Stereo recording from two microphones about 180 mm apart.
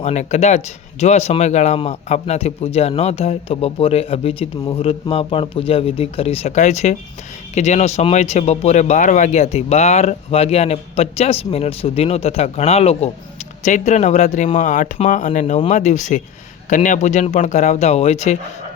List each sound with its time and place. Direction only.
0.0 s speech: 40° left (ahead or behind)